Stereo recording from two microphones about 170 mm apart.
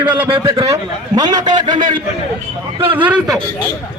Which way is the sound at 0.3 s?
30° right (ahead or behind).